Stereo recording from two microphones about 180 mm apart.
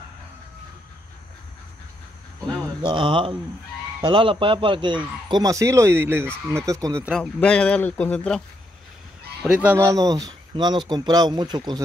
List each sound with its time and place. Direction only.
2.8 s speech: 25° right (ahead or behind)
7.3 s speech: 5° left (ahead or behind)
9.4 s speech: 10° right (ahead or behind); by 11.8 s 25° right (ahead or behind)